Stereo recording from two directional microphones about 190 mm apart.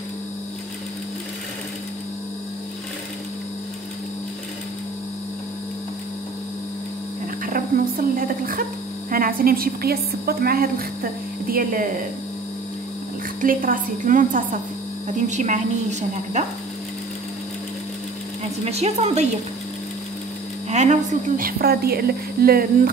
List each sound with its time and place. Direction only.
7.4 s a woman's voice: 45° right (ahead or behind)
13.4 s a woman's voice: 45° right (ahead or behind)
18.6 s a woman's voice: 35° right (ahead or behind)
20.7 s a woman's voice: 40° right (ahead or behind)